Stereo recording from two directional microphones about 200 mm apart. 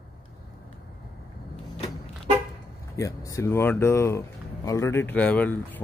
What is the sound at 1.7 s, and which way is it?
Vehicle, 30° left (ahead or behind).